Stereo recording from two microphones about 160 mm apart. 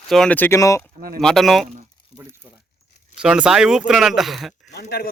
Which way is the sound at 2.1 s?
20° right (ahead or behind).